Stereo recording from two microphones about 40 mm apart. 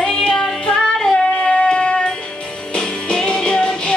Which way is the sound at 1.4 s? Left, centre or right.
Left.